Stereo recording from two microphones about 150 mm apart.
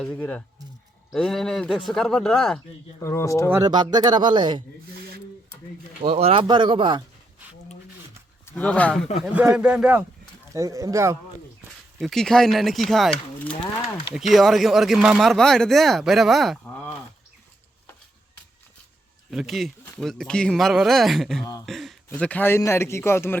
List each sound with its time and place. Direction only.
0.0 s a man's voice: 10° left (ahead or behind)
3.0 s speech: 20° left (ahead or behind)
3.5 s speech: 25° right (ahead or behind)
6.0 s speech: 40° right (ahead or behind)
8.4 s a man's voice: 10° left (ahead or behind)
9.2 s speech: 10° right (ahead or behind)
10.5 s speech: 20° right (ahead or behind)
11.9 s speech: centre (ahead or behind)
19.3 s speech: centre (ahead or behind)
21.7 s a sound: centre (ahead or behind)
22.1 s a man's voice: 10° left (ahead or behind)